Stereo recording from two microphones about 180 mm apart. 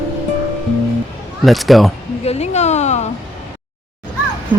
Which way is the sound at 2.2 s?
35° left (ahead or behind).